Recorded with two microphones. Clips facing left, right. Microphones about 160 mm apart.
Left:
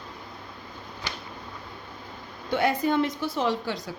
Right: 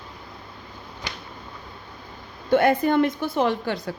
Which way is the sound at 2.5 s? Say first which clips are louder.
Right 5 dB; 55° right (ahead or behind).